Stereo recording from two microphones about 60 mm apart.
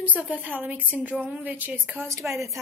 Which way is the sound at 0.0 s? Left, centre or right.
Right.